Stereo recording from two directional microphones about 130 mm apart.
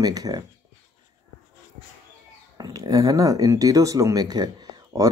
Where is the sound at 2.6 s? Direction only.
30° right (ahead or behind).